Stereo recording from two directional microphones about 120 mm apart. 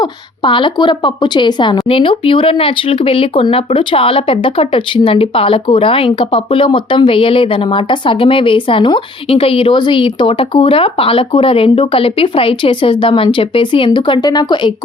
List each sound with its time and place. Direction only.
0.0 s speech: 45° left (ahead or behind)